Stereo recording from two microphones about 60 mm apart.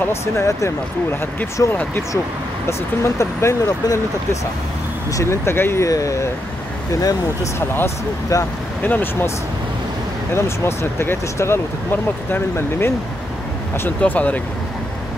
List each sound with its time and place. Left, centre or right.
0.1 s speech: left
3.0 s speech: left
5.9 s speech: left
6.9 s speech: left
7.5 s speech: left
8.8 s speech: left
10.3 s speech: left
13.8 s speech: left